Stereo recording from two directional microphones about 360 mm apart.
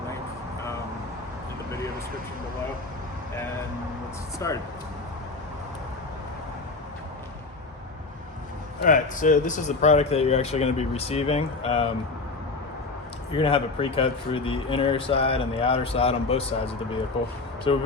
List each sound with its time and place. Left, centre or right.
4.4 s speech: centre
8.8 s speech: left
13.3 s speech: centre